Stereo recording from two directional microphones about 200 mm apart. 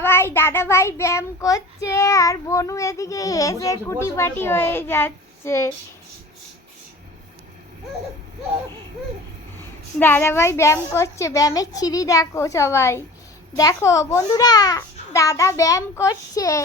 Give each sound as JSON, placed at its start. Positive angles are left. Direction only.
{"t": 0.0, "sound": "a child's voice", "side_deg": 10}
{"t": 10.0, "sound": "a child's voice", "side_deg": 10}